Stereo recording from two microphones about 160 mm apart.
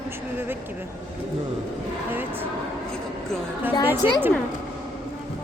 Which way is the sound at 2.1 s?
10° right (ahead or behind).